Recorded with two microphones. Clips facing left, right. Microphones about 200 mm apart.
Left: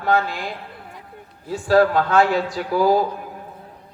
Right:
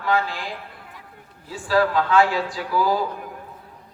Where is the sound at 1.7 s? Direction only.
50° left (ahead or behind).